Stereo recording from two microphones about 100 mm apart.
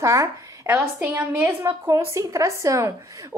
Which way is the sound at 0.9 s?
20° right (ahead or behind).